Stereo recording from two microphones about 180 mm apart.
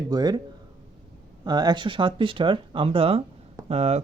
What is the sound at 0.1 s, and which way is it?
Speech, 20° right (ahead or behind).